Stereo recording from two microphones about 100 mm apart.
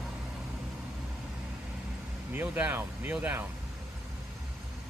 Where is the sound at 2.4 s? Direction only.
15° right (ahead or behind).